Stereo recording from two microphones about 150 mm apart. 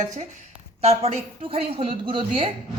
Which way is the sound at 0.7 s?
45° right (ahead or behind).